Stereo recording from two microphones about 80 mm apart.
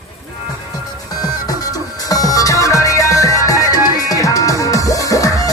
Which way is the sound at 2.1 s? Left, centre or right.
Left.